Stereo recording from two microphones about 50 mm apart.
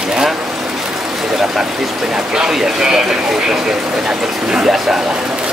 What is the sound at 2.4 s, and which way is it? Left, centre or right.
Speech, centre.